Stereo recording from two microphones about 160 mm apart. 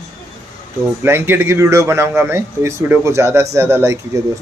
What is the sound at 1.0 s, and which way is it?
Speech, 15° right (ahead or behind).